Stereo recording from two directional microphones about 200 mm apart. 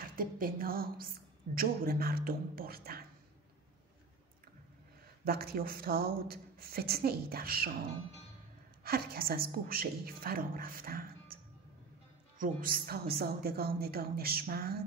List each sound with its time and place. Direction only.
0.1 s a woman's voice: 45° right (ahead or behind)
5.2 s speech: 50° right (ahead or behind)
8.8 s speech: 50° right (ahead or behind)
12.4 s speech: 45° right (ahead or behind)